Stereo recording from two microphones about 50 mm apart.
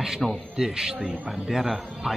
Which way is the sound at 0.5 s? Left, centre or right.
Centre.